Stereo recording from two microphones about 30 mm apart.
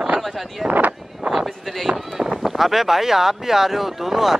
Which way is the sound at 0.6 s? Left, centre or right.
Right.